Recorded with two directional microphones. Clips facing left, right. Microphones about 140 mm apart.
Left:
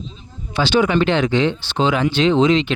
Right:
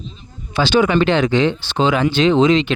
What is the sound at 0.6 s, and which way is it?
Speech, 90° right.